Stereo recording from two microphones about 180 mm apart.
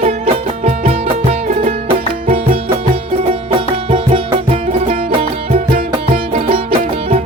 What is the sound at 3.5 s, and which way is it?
Music, 30° right (ahead or behind).